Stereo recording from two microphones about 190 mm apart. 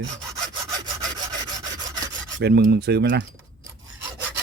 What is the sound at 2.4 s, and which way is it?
Speech, 60° right (ahead or behind).